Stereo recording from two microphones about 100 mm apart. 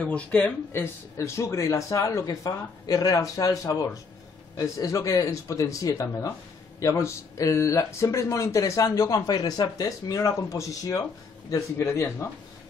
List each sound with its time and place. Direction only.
0.0 s speech: 15° left (ahead or behind)
0.7 s speech: 30° left (ahead or behind)